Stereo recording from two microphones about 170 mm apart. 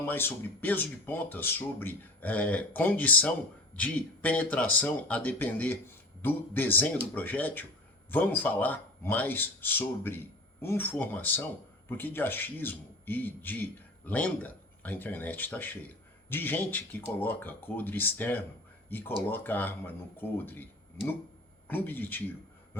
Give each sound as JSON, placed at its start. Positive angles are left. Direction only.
{"t": 0.0, "sound": "speech", "side_deg": 10}